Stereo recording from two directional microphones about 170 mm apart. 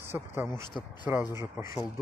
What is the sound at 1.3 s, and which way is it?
Speech, 15° right (ahead or behind).